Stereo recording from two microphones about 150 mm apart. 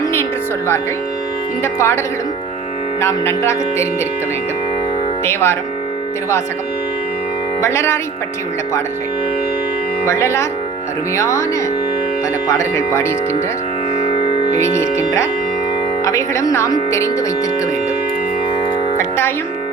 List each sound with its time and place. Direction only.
0.0 s music: 15° left (ahead or behind)
1.6 s speech: 15° left (ahead or behind)
3.0 s speech: 20° left (ahead or behind)
5.2 s speech: 15° left (ahead or behind)
7.6 s speech: 15° left (ahead or behind)
10.1 s speech: 20° left (ahead or behind)
12.5 s speech: 20° left (ahead or behind)
14.0 s music: 45° left (ahead or behind)
14.6 s speech: 20° left (ahead or behind)
18.9 s music: 15° left (ahead or behind)